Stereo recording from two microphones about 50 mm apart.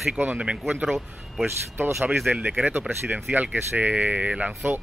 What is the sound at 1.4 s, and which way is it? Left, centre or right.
Speech, right.